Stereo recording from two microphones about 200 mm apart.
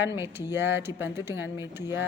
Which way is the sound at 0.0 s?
10° right (ahead or behind).